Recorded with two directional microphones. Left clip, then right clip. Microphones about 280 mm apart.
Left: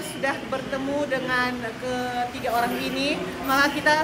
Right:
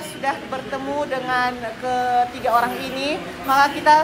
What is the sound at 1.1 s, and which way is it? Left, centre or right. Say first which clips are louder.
A woman's voice: right 4 dB; centre.